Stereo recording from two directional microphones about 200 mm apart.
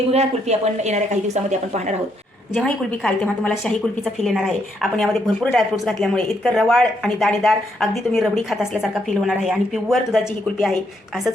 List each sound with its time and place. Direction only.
0.1 s speech: 30° right (ahead or behind)
2.5 s a woman's voice: 5° left (ahead or behind)